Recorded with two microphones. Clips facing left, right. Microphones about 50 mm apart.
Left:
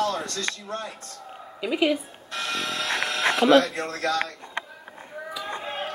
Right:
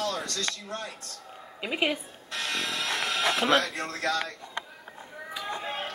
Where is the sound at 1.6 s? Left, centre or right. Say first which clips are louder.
Left 5 dB; centre.